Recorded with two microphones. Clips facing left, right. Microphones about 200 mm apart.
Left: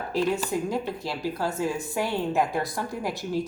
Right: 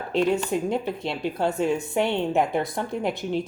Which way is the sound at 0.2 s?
5° left (ahead or behind).